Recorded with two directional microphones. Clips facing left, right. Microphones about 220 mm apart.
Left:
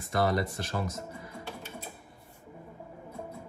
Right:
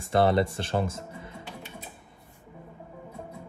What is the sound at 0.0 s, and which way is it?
Speech, 30° right (ahead or behind).